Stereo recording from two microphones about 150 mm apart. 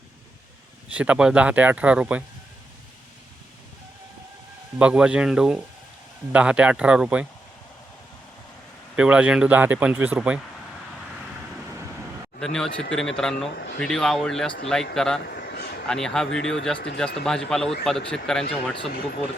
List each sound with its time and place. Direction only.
0.9 s speech: 10° right (ahead or behind)
4.8 s speech: 5° right (ahead or behind)
9.0 s speech: 10° right (ahead or behind)
12.4 s speech: 5° left (ahead or behind)
15.3 s a sound: 90° left
15.9 s speech: 5° left (ahead or behind)